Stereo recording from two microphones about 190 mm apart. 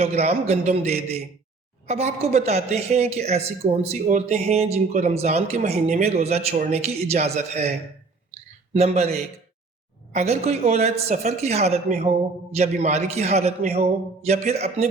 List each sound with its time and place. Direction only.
0.0 s a man's voice: 35° right (ahead or behind)
8.7 s a man's voice: 35° right (ahead or behind)